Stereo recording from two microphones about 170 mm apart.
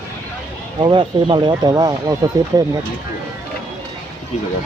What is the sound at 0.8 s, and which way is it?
Speech, 30° right (ahead or behind).